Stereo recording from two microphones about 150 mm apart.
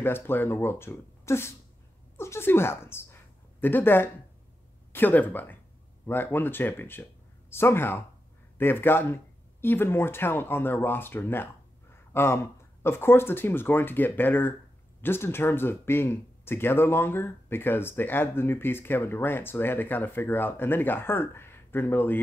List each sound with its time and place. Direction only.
0.0 s speech: 15° left (ahead or behind)